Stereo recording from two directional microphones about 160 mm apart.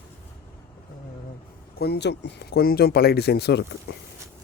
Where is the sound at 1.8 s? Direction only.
85° left.